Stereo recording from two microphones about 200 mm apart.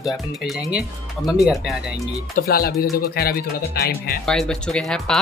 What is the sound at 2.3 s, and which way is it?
Speech, 50° left (ahead or behind).